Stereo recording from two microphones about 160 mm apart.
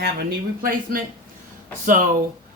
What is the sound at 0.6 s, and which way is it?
Speech, 65° right (ahead or behind).